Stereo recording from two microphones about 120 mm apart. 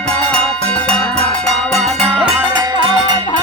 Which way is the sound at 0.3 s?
10° left (ahead or behind).